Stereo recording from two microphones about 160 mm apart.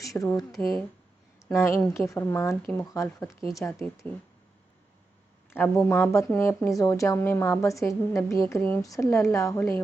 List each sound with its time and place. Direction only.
0.2 s speech: 20° left (ahead or behind)
0.6 s speech: centre (ahead or behind)
1.5 s speech: 15° left (ahead or behind)
5.5 s speech: 15° left (ahead or behind)